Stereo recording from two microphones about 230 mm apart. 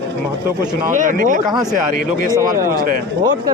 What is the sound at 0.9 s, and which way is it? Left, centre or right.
Speech, right.